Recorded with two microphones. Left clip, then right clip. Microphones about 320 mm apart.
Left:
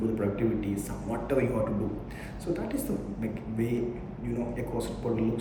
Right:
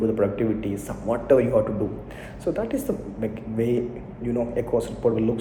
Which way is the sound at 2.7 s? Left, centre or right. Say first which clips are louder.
Right 5 dB; right.